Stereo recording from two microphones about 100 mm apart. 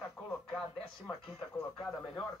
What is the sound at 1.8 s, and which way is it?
Speech, 5° left (ahead or behind).